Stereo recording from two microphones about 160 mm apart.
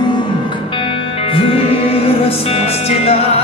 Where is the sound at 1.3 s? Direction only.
35° left (ahead or behind).